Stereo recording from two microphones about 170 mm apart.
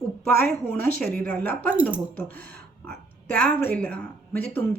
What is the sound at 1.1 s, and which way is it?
Speech, 10° left (ahead or behind).